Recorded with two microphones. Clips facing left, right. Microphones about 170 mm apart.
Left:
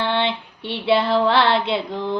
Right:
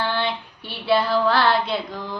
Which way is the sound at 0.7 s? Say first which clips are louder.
Left 2 dB; 25° left (ahead or behind).